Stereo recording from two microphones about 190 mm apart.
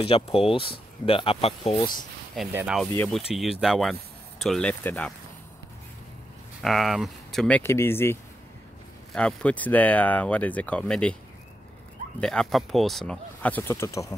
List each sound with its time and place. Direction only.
0.0 s speech: 30° left (ahead or behind)
2.5 s speech: 5° right (ahead or behind)
6.6 s speech: centre (ahead or behind)
12.2 s speech: 5° left (ahead or behind)